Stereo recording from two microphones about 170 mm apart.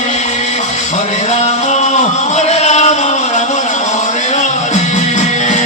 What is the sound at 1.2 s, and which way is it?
Music, 40° left (ahead or behind).